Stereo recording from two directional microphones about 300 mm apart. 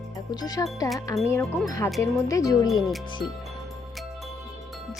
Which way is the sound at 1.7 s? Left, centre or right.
Centre.